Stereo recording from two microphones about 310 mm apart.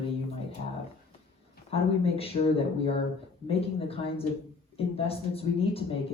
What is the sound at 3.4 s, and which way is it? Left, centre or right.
A woman's voice, centre.